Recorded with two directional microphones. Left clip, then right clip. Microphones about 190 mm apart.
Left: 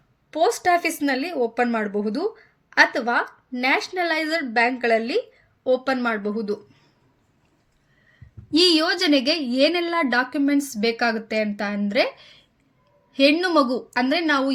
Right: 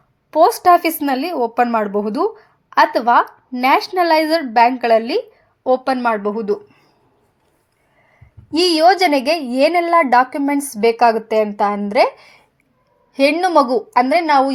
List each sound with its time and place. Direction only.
0.3 s a woman's voice: 20° right (ahead or behind)
8.5 s a woman's voice: 10° right (ahead or behind)